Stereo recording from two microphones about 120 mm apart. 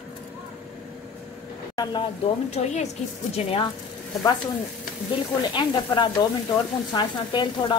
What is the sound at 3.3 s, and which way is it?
Speech, 50° left (ahead or behind).